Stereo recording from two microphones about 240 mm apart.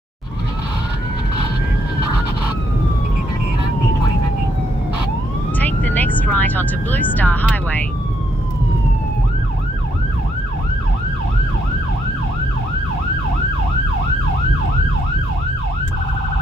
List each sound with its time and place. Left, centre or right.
5.6 s vehicle: centre